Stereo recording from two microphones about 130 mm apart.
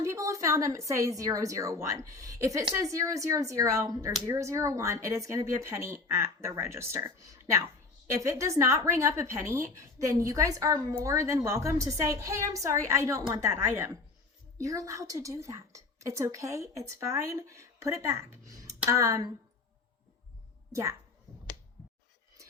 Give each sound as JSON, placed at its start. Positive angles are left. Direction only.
{"t": 0.0, "sound": "a woman's voice", "side_deg": -25}